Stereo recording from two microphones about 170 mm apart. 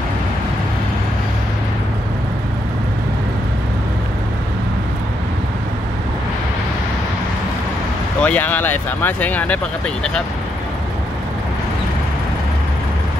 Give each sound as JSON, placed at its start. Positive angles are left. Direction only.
{"t": 8.2, "sound": "speech", "side_deg": 10}